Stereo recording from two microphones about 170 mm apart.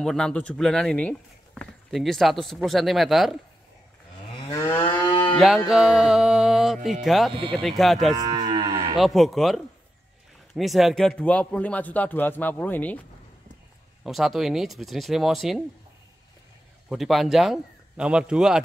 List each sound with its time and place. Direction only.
0.0 s speech: 5° left (ahead or behind)
4.6 s moo: 30° left (ahead or behind)
5.7 s speech: 5° right (ahead or behind)
8.1 s moo: 25° right (ahead or behind)
8.9 s speech: centre (ahead or behind)
14.0 s speech: centre (ahead or behind)
16.9 s speech: centre (ahead or behind)